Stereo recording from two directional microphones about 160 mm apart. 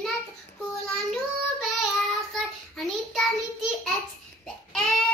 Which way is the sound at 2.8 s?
Centre (ahead or behind).